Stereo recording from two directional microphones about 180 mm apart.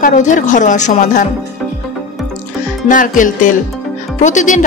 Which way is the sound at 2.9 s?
45° left (ahead or behind).